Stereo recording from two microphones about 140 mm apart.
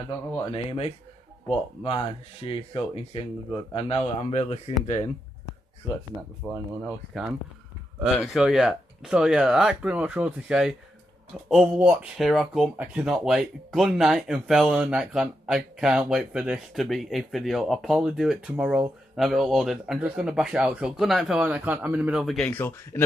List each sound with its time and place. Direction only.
0.5 s speech: 45° left (ahead or behind)
6.4 s speech: 5° left (ahead or behind)
8.0 s speech: 5° right (ahead or behind)
22.2 s speech: centre (ahead or behind)
22.5 s speech: 15° left (ahead or behind)